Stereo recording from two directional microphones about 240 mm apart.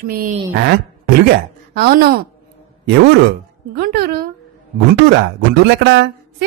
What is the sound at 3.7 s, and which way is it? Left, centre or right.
Speech, right.